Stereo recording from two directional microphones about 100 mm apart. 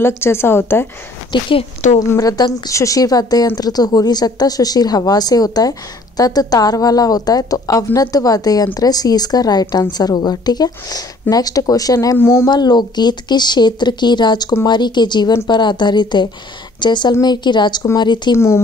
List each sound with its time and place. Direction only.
0.0 s a woman's voice: 25° left (ahead or behind)
1.3 s speech: 65° left (ahead or behind)
2.0 s a woman's voice: 35° left (ahead or behind)
12.4 s speech: 45° left (ahead or behind)
18.3 s a woman's voice: 25° left (ahead or behind)